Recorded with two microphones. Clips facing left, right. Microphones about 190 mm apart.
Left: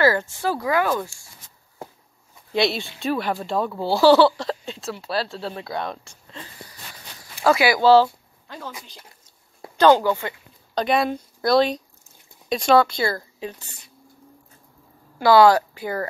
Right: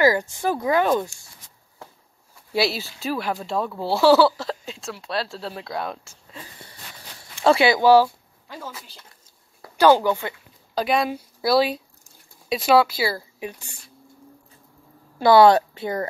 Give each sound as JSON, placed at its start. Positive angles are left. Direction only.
{"t": 0.0, "sound": "speech", "side_deg": -15}
{"t": 2.5, "sound": "speech", "side_deg": -5}
{"t": 7.4, "sound": "speech", "side_deg": -25}
{"t": 9.8, "sound": "a woman's voice", "side_deg": -10}
{"t": 15.1, "sound": "speech", "side_deg": -25}